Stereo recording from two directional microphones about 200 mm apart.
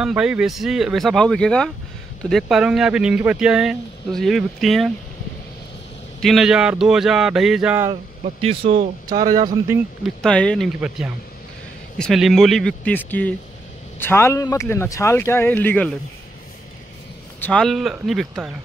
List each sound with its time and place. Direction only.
0.0 s speech: 5° right (ahead or behind)
6.2 s speech: centre (ahead or behind)
7.9 s a man's voice: 30° right (ahead or behind)
9.1 s a man's voice: 20° right (ahead or behind)
10.0 s speech: 5° left (ahead or behind)
12.0 s speech: centre (ahead or behind)
17.4 s speech: 5° left (ahead or behind)